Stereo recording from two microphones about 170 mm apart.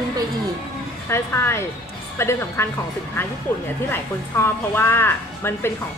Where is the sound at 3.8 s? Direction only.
15° left (ahead or behind).